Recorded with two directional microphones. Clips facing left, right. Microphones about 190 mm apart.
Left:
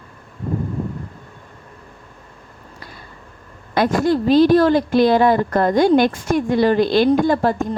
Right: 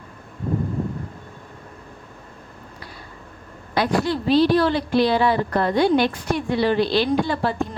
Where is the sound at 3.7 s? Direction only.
45° left (ahead or behind).